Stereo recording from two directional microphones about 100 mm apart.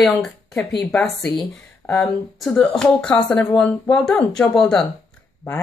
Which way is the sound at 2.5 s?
10° left (ahead or behind).